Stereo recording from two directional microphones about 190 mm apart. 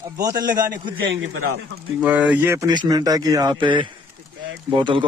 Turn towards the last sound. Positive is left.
turn(degrees=-25)  # may be behind; listen again after turning